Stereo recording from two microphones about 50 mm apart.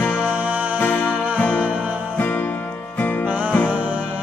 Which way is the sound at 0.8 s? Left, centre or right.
Left.